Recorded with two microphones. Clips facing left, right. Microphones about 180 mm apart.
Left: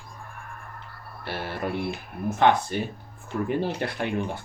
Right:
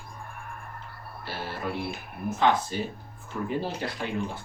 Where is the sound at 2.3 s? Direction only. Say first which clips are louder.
Left 3 dB; 60° left (ahead or behind).